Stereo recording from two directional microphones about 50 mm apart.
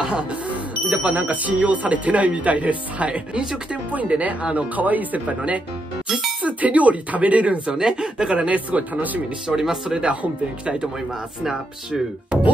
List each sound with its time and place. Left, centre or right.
0.0 s music: right
1.0 s speech: right
7.7 s a woman's voice: centre
8.5 s speech: right
9.6 s speech: centre